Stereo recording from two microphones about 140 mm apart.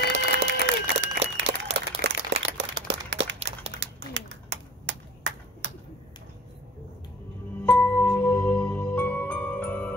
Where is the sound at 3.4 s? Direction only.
45° right (ahead or behind).